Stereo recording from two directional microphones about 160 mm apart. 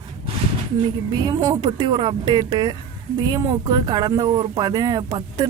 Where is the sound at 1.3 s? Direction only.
25° right (ahead or behind).